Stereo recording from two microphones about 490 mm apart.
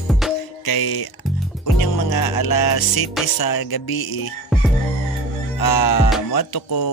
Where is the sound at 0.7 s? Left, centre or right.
Left.